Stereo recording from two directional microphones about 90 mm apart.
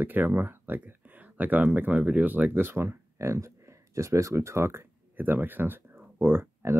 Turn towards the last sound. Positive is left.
turn(degrees=-30)  # may be behind; listen again after turning